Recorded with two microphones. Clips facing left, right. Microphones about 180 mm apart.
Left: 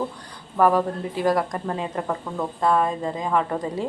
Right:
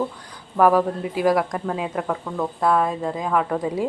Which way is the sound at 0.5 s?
5° right (ahead or behind).